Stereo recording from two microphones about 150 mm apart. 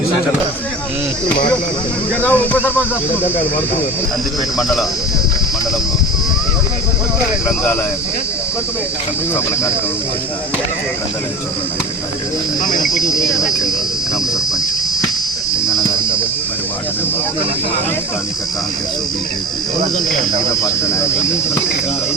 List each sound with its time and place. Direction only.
2.2 s speech: 10° left (ahead or behind)
4.5 s speech: centre (ahead or behind)
12.6 s cricket: 60° left (ahead or behind)
13.1 s speech: 20° left (ahead or behind)
20.6 s speech: 20° left (ahead or behind)